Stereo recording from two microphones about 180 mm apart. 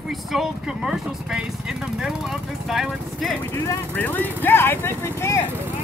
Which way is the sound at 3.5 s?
15° left (ahead or behind).